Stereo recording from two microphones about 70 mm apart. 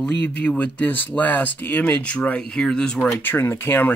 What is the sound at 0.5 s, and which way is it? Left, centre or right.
Speech, left.